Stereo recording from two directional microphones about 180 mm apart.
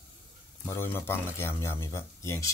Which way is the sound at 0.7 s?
10° left (ahead or behind).